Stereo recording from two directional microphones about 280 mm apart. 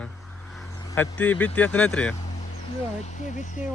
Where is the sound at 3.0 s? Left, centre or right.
Left.